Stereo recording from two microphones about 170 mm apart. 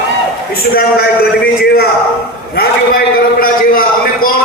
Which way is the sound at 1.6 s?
70° left (ahead or behind).